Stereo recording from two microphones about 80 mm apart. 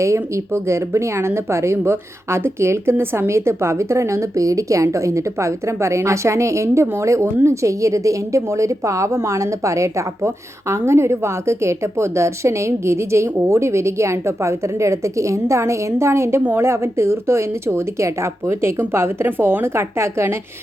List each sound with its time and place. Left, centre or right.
0.0 s a woman's voice: right